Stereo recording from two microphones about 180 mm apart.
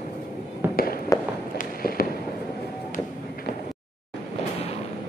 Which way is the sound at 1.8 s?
55° left (ahead or behind).